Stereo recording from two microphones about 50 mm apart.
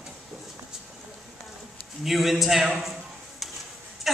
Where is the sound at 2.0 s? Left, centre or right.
Centre.